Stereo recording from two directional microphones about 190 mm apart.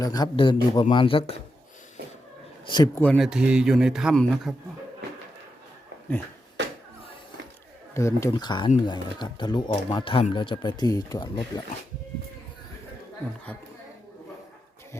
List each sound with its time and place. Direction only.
0.0 s speech: 20° left (ahead or behind)
2.6 s speech: 20° left (ahead or behind)
3.0 s a man's voice: 5° left (ahead or behind)
7.9 s speech: 15° left (ahead or behind)